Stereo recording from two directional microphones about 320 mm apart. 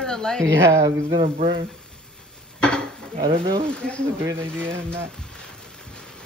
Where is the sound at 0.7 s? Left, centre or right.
Centre.